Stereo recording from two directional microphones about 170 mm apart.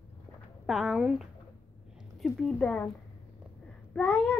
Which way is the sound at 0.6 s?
Centre (ahead or behind).